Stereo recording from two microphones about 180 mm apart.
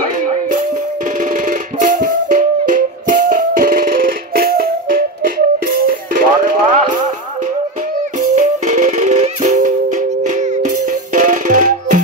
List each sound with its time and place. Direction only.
1.3 s music: 50° right (ahead or behind)
8.2 s music: 45° right (ahead or behind)